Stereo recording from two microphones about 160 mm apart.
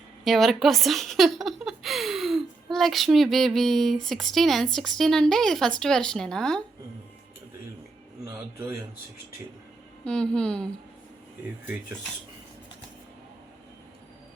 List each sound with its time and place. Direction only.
0.3 s speech: centre (ahead or behind)
8.2 s a sound: 15° right (ahead or behind)
10.0 s speech: 5° left (ahead or behind)